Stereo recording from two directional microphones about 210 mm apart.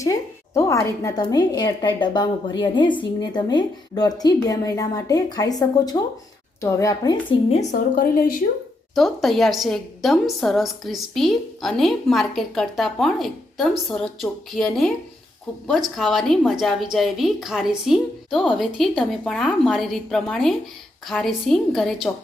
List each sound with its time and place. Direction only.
0.0 s a woman's voice: 15° left (ahead or behind)
7.9 s a woman's voice: 40° left (ahead or behind)
9.0 s a woman's voice: centre (ahead or behind)
16.0 s a woman's voice: centre (ahead or behind)